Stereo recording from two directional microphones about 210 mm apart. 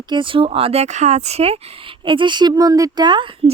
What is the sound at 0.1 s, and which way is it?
A woman's voice, 25° right (ahead or behind).